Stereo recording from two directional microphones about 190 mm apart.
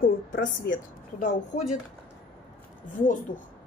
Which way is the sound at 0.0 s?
45° left (ahead or behind).